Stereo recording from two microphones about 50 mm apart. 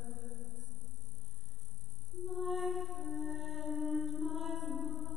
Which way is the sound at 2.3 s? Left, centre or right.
Centre.